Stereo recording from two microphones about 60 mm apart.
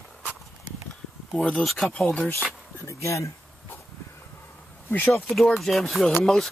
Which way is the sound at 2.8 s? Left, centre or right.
Left.